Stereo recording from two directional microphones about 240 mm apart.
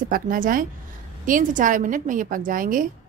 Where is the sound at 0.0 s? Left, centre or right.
Right.